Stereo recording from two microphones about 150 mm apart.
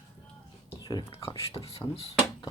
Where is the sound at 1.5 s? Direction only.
40° left (ahead or behind).